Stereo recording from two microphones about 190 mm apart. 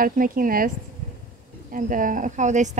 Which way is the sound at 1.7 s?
45° right (ahead or behind).